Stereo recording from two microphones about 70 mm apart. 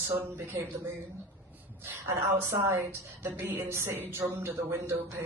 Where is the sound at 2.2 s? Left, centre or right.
Right.